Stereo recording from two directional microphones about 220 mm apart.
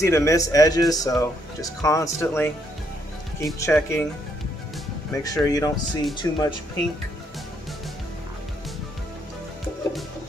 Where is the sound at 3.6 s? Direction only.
10° left (ahead or behind).